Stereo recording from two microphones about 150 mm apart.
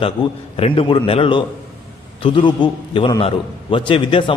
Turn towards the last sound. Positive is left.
turn(degrees=35)  # may be behind; listen again after turning